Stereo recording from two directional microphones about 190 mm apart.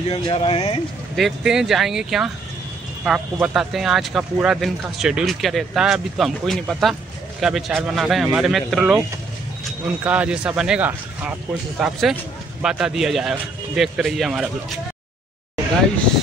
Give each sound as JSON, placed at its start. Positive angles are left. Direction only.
{"t": 0.1, "sound": "speech", "side_deg": 30}
{"t": 1.1, "sound": "speech", "side_deg": 0}
{"t": 10.0, "sound": "speech", "side_deg": -5}